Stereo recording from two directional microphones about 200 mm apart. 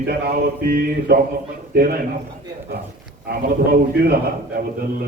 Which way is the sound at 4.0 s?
50° right (ahead or behind).